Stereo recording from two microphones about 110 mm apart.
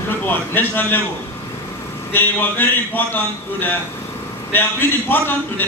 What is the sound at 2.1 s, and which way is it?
A man's voice, 20° left (ahead or behind).